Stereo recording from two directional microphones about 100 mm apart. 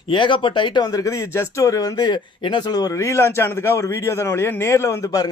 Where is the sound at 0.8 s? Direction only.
35° left (ahead or behind).